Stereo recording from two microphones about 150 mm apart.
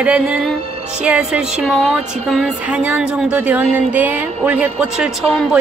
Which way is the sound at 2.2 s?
Centre (ahead or behind).